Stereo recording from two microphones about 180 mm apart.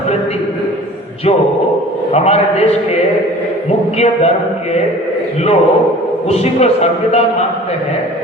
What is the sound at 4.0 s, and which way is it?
Speech, 35° left (ahead or behind).